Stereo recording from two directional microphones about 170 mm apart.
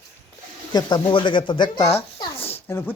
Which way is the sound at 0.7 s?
25° left (ahead or behind).